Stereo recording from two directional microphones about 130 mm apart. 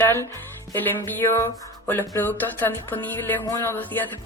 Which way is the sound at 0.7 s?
15° left (ahead or behind).